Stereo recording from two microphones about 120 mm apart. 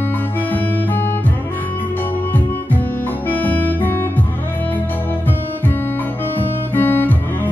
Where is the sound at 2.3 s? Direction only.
15° left (ahead or behind).